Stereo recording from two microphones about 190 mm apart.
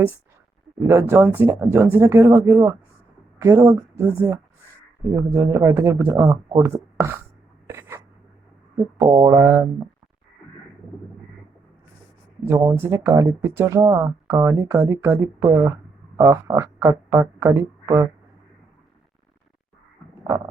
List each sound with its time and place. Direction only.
0.9 s speech: 15° right (ahead or behind)
7.7 s a sound: 15° right (ahead or behind)
9.0 s speech: 15° right (ahead or behind)
12.5 s speech: 15° right (ahead or behind)